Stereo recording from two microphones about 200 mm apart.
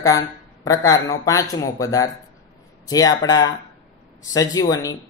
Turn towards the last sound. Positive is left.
turn(degrees=20)  # may be behind; listen again after turning